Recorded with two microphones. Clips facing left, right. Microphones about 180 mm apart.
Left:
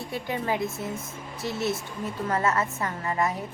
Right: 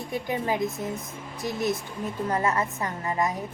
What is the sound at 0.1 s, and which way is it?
A woman's voice, 20° right (ahead or behind).